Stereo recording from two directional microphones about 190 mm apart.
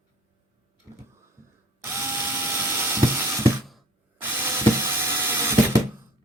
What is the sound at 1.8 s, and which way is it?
Tools, 15° right (ahead or behind).